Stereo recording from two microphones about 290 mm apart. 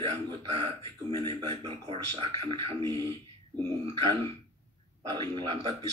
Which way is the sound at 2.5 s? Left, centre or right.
Centre.